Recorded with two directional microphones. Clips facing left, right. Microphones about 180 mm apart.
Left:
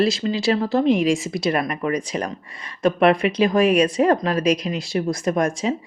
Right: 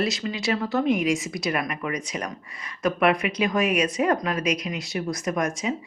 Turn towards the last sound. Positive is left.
turn(degrees=30)  # may be behind; listen again after turning